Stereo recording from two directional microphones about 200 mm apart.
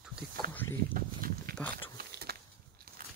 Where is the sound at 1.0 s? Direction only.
45° right (ahead or behind).